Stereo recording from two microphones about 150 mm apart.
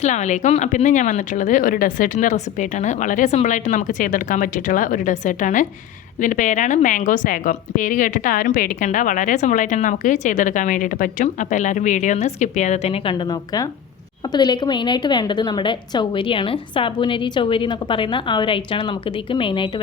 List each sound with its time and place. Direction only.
0.0 s a woman's voice: 50° left (ahead or behind); by 19.8 s 35° left (ahead or behind)